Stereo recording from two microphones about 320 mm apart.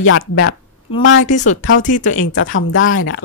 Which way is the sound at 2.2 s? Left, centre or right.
Left.